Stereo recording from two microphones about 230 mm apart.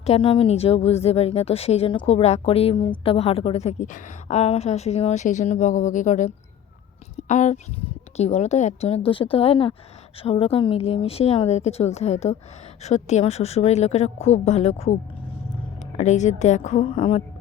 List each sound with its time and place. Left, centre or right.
0.0 s a woman's voice: left